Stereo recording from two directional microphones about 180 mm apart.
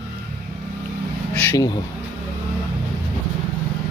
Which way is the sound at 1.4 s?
15° left (ahead or behind).